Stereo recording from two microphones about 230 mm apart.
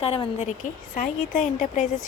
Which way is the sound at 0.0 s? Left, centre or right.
Left.